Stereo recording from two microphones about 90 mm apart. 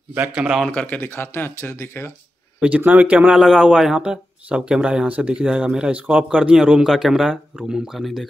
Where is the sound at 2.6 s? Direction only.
15° right (ahead or behind).